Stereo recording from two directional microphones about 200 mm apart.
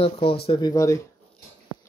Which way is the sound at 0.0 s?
25° left (ahead or behind).